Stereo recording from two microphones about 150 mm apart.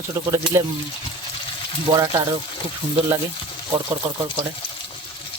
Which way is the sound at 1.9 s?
25° right (ahead or behind).